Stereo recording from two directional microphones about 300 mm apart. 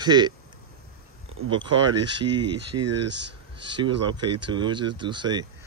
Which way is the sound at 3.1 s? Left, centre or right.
Right.